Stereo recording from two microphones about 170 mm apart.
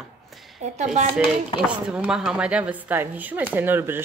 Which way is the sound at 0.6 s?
40° right (ahead or behind).